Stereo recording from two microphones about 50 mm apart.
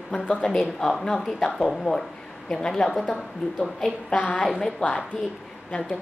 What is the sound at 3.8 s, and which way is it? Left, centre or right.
Speech, left.